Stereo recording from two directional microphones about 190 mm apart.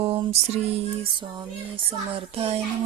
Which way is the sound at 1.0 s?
25° right (ahead or behind).